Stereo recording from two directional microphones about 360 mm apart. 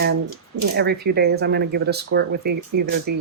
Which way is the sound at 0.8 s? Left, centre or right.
Right.